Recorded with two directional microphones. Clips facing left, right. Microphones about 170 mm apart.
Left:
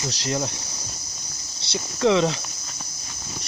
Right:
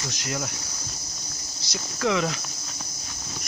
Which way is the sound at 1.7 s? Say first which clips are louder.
Left 5 dB; 25° left (ahead or behind).